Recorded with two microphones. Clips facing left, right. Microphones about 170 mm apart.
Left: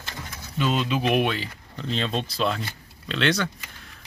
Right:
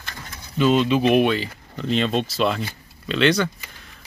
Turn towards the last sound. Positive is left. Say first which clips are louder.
# right 5 dB
turn(degrees=0)  # may be behind; listen again after turning